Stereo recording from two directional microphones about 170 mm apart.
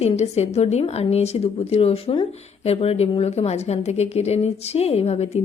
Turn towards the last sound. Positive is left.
turn(degrees=35)  # may be behind; listen again after turning